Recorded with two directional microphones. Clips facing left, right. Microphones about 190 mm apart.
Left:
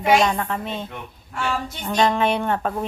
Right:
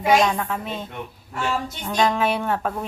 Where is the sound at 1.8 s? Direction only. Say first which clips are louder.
Left 2 dB; centre (ahead or behind).